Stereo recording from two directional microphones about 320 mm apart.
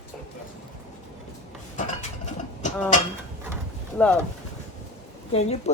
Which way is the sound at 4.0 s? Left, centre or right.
Centre.